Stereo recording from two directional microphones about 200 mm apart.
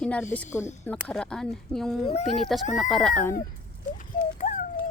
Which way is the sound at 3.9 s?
40° left (ahead or behind).